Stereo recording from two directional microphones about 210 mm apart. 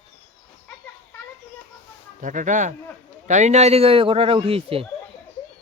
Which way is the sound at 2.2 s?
35° right (ahead or behind).